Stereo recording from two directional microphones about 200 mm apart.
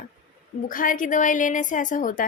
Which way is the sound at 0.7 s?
45° left (ahead or behind).